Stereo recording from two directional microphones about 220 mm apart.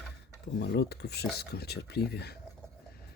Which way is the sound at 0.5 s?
45° left (ahead or behind).